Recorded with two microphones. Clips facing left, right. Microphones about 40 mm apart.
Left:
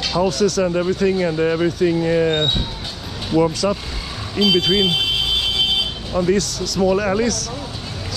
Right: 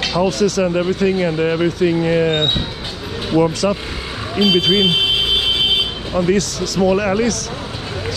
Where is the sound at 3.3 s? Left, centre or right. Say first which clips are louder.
Right 2 dB; right.